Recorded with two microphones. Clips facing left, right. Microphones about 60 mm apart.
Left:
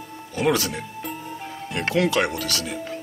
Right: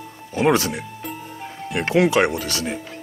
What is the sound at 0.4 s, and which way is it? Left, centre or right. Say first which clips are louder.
Speech: right 4 dB; right.